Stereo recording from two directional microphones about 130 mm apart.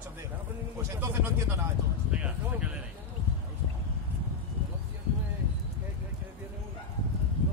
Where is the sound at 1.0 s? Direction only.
20° right (ahead or behind).